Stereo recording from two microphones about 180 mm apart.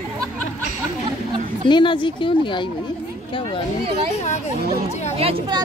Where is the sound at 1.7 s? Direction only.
25° left (ahead or behind).